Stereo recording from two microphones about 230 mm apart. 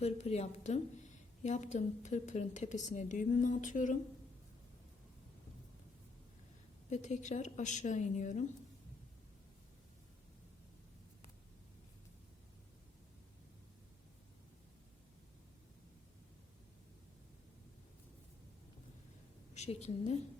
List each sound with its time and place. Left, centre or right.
0.0 s a woman's voice: left
6.9 s a woman's voice: left
19.5 s a woman's voice: left